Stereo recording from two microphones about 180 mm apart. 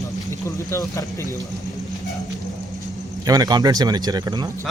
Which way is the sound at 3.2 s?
20° right (ahead or behind).